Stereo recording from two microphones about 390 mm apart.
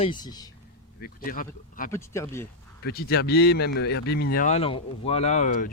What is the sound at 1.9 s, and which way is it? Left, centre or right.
Speech, centre.